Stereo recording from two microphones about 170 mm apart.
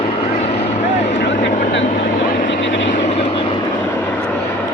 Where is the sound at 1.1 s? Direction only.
90° left.